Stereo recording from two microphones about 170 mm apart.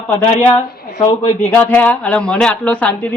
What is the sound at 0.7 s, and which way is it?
Speech, 65° left (ahead or behind).